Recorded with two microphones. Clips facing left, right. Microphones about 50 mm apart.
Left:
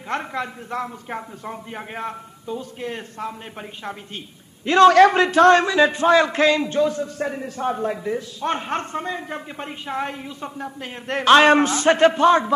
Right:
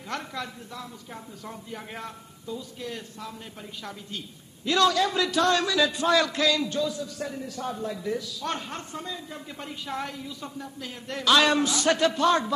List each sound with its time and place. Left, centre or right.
0.1 s a man's voice: left
0.7 s speech: left
1.4 s a man's voice: left
4.6 s a man's voice: left
4.9 s a man's voice: left
8.0 s a man's voice: left
8.7 s speech: left
9.6 s a man's voice: left